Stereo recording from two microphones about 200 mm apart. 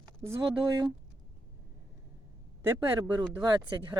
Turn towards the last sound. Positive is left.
turn(degrees=-20)  # may be behind; listen again after turning